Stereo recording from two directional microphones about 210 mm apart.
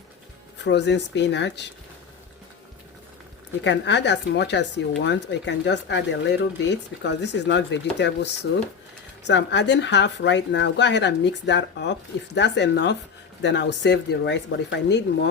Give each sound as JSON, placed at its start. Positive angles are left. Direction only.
{"t": 0.6, "sound": "speech", "side_deg": 55}
{"t": 3.6, "sound": "speech", "side_deg": 55}